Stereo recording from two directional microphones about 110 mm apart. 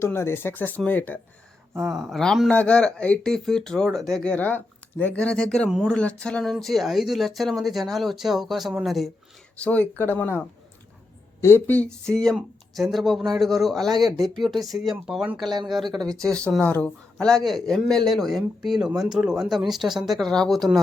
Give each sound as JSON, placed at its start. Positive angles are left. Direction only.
{"t": 0.0, "sound": "speech", "side_deg": 25}
{"t": 1.8, "sound": "speech", "side_deg": -5}
{"t": 9.6, "sound": "speech", "side_deg": 15}